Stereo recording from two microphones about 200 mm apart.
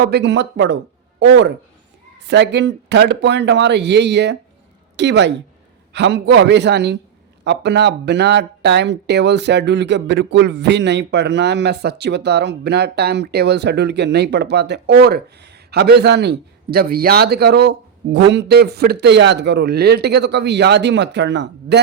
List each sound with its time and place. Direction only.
0.0 s speech: 55° right (ahead or behind)